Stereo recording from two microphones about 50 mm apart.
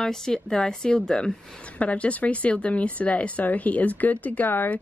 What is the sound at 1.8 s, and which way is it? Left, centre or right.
A woman's voice, left.